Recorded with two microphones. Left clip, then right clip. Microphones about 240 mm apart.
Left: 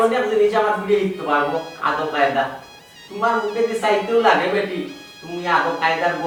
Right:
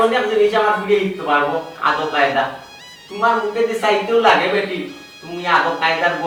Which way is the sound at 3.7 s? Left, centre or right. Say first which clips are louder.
Right 2 dB; centre.